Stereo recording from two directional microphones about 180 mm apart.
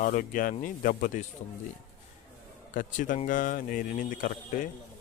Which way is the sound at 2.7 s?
45° left (ahead or behind).